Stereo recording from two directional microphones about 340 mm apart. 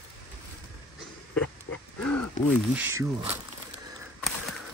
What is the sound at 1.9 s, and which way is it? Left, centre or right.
Speech, left.